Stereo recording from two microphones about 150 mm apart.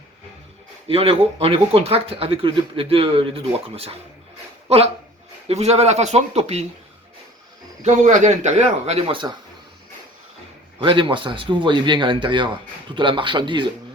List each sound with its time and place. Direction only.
0.9 s speech: 40° right (ahead or behind)
7.8 s speech: 55° right (ahead or behind); by 9.3 s 35° right (ahead or behind)
10.8 s speech: 35° right (ahead or behind)